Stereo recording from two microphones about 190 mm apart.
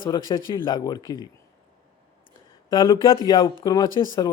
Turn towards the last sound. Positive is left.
turn(degrees=20)  # may be behind; listen again after turning